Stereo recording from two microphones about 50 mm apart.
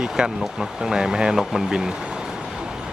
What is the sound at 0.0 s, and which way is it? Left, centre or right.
Speech, centre.